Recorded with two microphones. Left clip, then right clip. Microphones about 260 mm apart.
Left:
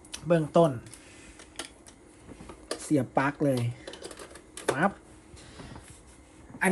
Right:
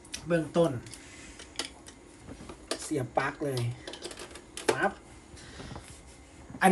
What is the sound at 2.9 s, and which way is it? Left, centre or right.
Speech, left.